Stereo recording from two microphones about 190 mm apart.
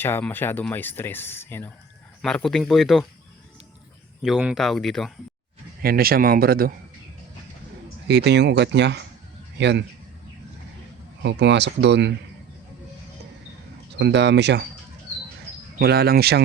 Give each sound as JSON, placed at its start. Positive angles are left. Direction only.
{"t": 0.0, "sound": "speech", "side_deg": 10}
{"t": 4.2, "sound": "speech", "side_deg": -5}
{"t": 5.8, "sound": "speech", "side_deg": -50}
{"t": 8.0, "sound": "speech", "side_deg": -65}
{"t": 11.2, "sound": "speech", "side_deg": -65}
{"t": 14.0, "sound": "speech", "side_deg": -65}
{"t": 15.8, "sound": "speech", "side_deg": -55}